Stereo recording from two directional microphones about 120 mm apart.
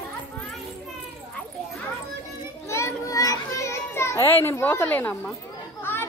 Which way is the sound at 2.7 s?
25° left (ahead or behind).